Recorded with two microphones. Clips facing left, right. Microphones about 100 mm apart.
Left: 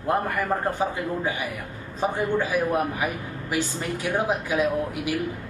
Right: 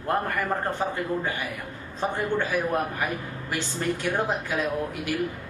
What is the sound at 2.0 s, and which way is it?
A man's voice, 10° left (ahead or behind).